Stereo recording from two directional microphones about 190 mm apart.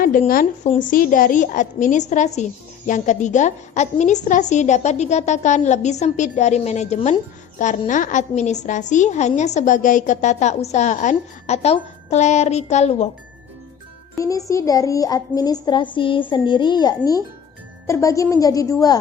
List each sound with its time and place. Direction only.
0.0 s a woman's voice: 45° left (ahead or behind)
14.2 s a child's voice: 15° left (ahead or behind)